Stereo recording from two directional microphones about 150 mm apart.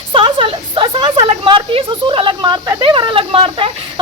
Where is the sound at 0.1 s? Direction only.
35° right (ahead or behind).